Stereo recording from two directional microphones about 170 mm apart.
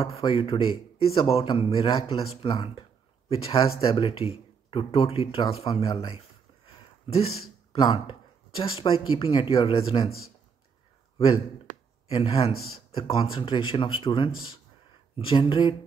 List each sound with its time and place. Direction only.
0.0 s speech: 35° left (ahead or behind)
12.1 s speech: 35° left (ahead or behind)